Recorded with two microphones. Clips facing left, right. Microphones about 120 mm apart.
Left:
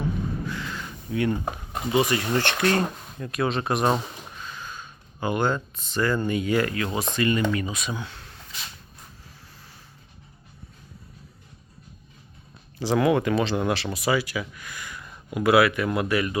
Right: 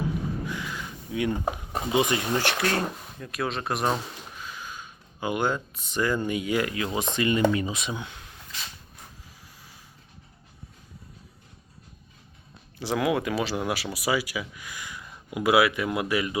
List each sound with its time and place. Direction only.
0.4 s a sound: 15° right (ahead or behind)
1.9 s speech: 20° right (ahead or behind)
2.2 s speech: 5° right (ahead or behind)
12.9 s speech: 5° right (ahead or behind)